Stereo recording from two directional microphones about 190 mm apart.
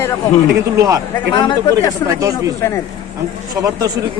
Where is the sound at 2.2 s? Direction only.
15° right (ahead or behind).